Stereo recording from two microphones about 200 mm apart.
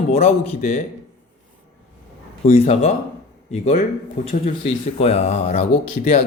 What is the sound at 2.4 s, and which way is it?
A man's voice, 35° left (ahead or behind).